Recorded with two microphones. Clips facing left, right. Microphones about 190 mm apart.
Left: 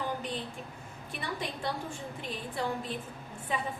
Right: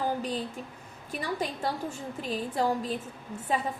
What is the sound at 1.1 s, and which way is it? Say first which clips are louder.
A woman's voice: right 5 dB; 40° right (ahead or behind).